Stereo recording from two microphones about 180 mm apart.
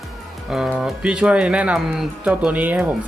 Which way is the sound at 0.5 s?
Centre (ahead or behind).